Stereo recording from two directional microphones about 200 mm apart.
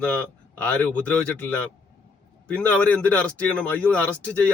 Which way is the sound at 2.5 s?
5° left (ahead or behind).